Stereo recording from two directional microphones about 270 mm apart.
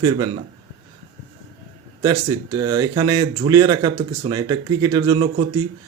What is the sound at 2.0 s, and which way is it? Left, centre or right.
Speech, centre.